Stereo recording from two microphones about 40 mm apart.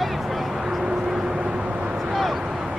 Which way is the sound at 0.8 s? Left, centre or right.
Centre.